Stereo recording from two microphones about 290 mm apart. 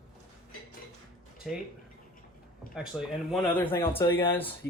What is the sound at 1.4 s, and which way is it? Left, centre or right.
Speech, centre.